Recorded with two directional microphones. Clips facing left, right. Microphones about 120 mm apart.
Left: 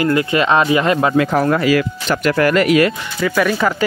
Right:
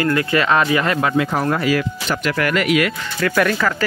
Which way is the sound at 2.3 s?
35° left (ahead or behind).